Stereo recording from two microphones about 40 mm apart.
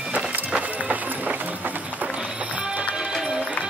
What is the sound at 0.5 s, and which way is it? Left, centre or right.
Music, right.